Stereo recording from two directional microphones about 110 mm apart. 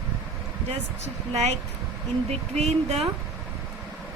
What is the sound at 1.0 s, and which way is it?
Speech, 85° right.